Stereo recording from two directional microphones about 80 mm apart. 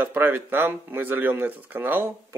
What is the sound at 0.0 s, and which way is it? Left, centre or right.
Speech, right.